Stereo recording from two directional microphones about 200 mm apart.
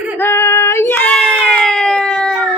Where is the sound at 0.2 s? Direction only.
10° left (ahead or behind).